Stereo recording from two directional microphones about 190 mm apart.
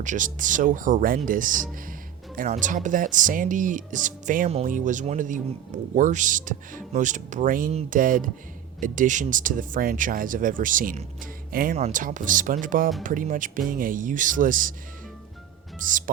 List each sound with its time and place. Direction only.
0.0 s speech: 40° right (ahead or behind)
15.8 s speech: 45° right (ahead or behind)